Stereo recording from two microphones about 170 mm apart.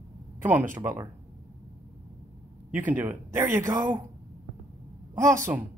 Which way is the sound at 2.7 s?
10° right (ahead or behind).